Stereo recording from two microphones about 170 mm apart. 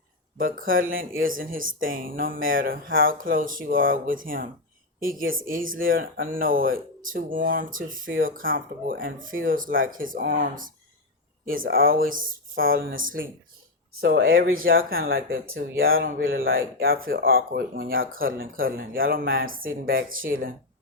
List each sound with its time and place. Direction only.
0.3 s speech: 55° right (ahead or behind)